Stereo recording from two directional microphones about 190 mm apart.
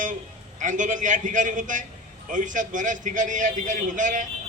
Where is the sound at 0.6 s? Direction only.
40° right (ahead or behind).